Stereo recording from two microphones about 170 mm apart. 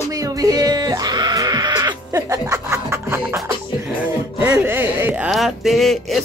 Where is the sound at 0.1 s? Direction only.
20° right (ahead or behind).